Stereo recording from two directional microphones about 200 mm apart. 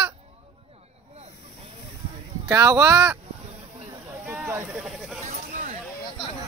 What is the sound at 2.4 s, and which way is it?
Speech, 15° right (ahead or behind).